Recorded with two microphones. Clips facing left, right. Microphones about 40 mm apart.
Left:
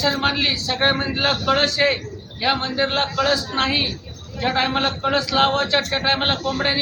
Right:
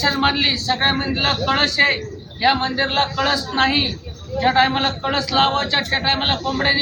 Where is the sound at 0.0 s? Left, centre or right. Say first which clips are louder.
Right 2 dB; centre.